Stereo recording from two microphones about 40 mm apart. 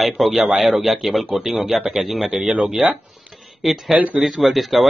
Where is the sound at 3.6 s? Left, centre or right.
Centre.